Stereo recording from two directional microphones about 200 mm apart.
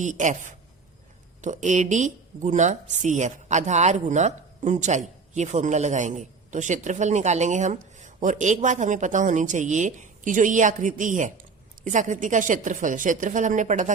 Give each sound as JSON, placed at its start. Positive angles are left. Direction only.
{"t": 0.0, "sound": "speech", "side_deg": -40}